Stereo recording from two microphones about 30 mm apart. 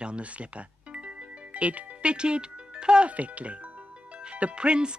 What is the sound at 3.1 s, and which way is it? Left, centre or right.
Speech, right.